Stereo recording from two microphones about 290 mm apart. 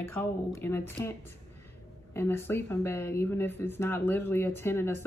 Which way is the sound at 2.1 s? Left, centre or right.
Centre.